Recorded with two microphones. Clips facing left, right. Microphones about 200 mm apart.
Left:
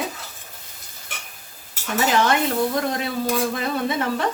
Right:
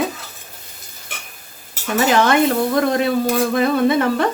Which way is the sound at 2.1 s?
65° right (ahead or behind).